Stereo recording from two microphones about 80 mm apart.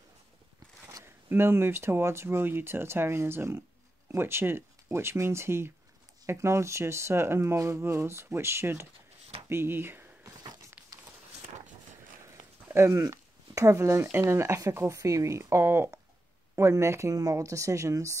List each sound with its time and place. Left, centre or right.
1.0 s speech: right
10.8 s a sound: centre
12.6 s speech: right